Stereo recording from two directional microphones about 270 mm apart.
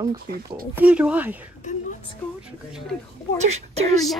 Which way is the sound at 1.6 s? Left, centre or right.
Left.